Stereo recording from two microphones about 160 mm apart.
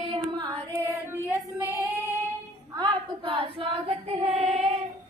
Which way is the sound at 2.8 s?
35° right (ahead or behind).